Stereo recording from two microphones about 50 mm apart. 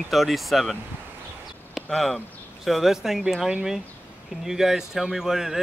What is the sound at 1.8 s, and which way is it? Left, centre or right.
A man's voice, centre.